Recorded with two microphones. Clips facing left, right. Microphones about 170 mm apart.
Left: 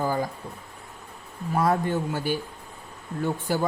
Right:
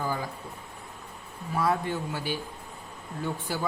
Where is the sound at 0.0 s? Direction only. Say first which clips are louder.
Left 5 dB; 45° left (ahead or behind).